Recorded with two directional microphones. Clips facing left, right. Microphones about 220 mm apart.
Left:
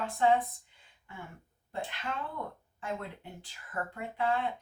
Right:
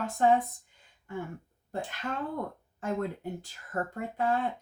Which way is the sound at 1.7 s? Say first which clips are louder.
Right 3 dB; 45° right (ahead or behind).